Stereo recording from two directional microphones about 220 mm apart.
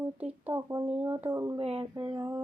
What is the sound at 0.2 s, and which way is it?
Speech, 5° right (ahead or behind).